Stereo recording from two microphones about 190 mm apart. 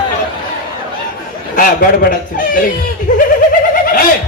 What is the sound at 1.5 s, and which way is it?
Speech, 45° left (ahead or behind).